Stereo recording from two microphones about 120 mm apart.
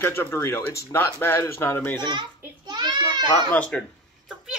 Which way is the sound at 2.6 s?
35° right (ahead or behind).